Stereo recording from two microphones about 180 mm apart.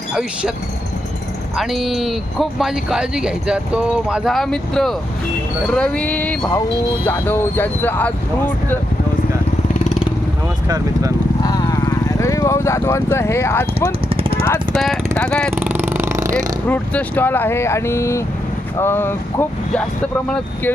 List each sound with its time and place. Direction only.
0.1 s speech: 5° right (ahead or behind)
1.5 s speech: centre (ahead or behind)
11.4 s speech: 20° left (ahead or behind)
14.1 s a sound: 30° right (ahead or behind)
15.2 s speech: 5° left (ahead or behind)
15.5 s a sound: 10° right (ahead or behind)
16.6 s speech: 10° left (ahead or behind)